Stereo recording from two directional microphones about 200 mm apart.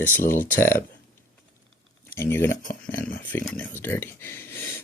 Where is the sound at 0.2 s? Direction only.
45° left (ahead or behind).